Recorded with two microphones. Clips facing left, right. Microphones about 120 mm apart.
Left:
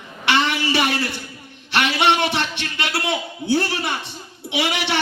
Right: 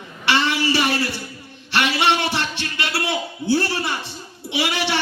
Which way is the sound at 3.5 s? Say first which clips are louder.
Left 2 dB; 20° left (ahead or behind).